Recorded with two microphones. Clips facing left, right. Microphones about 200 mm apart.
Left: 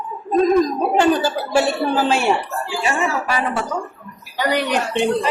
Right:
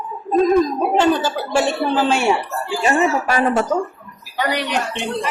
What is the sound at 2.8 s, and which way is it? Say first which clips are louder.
Speech: right 5 dB; 45° right (ahead or behind).